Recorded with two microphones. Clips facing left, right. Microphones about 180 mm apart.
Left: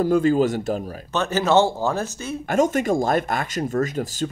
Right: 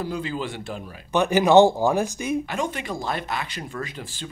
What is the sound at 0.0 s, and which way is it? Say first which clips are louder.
Speech: left 11 dB; 45° left (ahead or behind).